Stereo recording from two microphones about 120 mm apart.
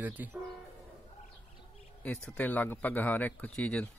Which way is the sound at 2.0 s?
10° left (ahead or behind).